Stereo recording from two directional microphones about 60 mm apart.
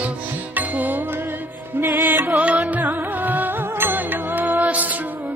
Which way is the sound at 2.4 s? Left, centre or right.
Right.